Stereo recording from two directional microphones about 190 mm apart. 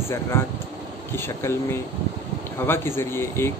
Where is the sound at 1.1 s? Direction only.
10° left (ahead or behind).